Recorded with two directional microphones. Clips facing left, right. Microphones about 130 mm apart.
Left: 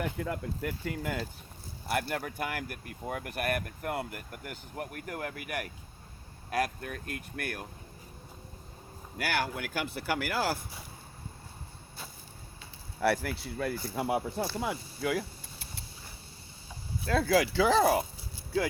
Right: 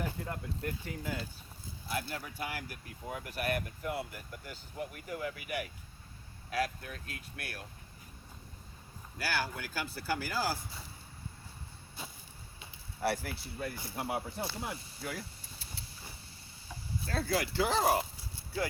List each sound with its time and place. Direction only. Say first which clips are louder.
0.0 s speech: left 5 dB; 90° left
1.9 s speech: left 6 dB; 55° left (ahead or behind)
9.1 s speech: left 4 dB; 55° left (ahead or behind)
13.0 s speech: left 5 dB; 80° left
17.1 s speech: left 8 dB; 85° left